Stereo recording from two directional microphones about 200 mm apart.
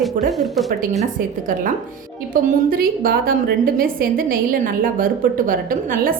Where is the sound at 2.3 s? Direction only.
45° right (ahead or behind).